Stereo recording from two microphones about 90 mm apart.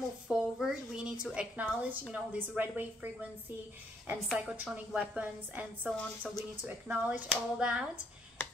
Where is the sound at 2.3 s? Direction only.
20° right (ahead or behind).